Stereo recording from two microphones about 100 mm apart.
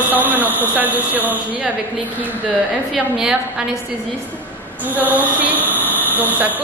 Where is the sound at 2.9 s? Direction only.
5° right (ahead or behind).